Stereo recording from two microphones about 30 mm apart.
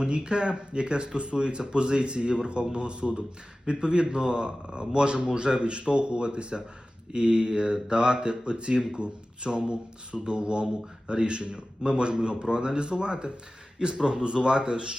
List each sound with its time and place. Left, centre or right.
0.3 s speech: right